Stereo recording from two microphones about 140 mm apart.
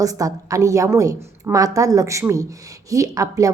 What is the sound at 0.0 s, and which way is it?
A woman's voice, 25° right (ahead or behind).